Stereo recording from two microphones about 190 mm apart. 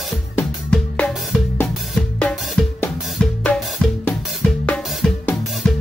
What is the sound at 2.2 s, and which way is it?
Drum kit, 5° left (ahead or behind).